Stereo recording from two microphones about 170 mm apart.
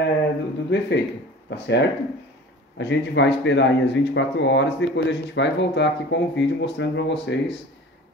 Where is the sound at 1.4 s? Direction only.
90° left.